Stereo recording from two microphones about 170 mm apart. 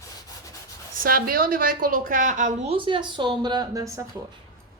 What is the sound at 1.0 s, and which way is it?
A woman's voice, 60° right (ahead or behind).